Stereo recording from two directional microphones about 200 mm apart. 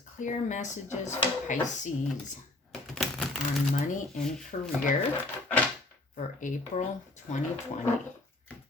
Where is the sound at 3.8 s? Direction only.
40° left (ahead or behind).